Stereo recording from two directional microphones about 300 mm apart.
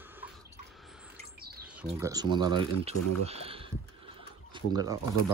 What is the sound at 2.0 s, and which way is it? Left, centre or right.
Speech, centre.